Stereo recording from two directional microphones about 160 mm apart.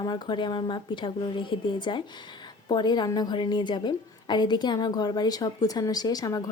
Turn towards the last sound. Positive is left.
turn(degrees=25)  # may be behind; listen again after turning